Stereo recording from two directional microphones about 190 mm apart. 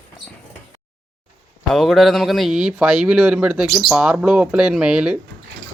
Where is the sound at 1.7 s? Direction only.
Centre (ahead or behind).